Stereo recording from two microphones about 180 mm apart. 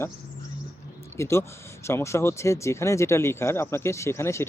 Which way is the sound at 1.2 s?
15° left (ahead or behind).